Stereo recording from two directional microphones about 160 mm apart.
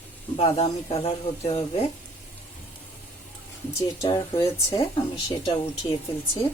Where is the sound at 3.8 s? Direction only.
20° left (ahead or behind).